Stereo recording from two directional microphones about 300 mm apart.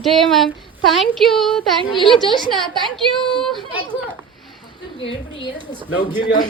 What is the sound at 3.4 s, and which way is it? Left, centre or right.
Speech, centre.